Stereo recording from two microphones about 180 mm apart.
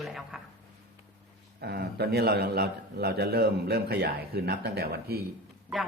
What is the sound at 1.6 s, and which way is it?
A man's voice, 65° right (ahead or behind).